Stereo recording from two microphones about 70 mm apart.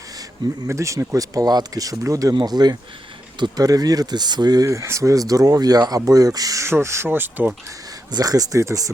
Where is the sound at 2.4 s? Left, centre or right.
Right.